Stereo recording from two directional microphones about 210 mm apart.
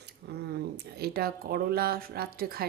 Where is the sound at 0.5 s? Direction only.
50° right (ahead or behind).